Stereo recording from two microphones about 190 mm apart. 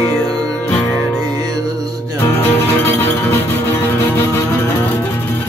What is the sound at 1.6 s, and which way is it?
Music, 20° right (ahead or behind).